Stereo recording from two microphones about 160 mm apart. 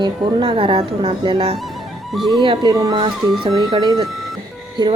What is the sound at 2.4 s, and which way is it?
Speech, 30° right (ahead or behind).